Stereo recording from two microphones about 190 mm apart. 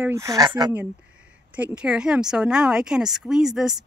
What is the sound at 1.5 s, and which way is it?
Speech, 5° right (ahead or behind).